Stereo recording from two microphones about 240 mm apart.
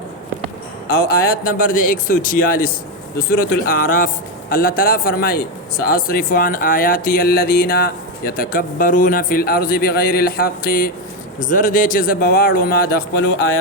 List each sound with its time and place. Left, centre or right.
1.0 s a man's voice: left